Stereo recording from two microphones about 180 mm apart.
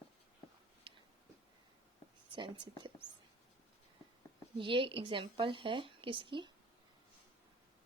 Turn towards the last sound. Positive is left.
turn(degrees=-25)  # may be behind; listen again after turning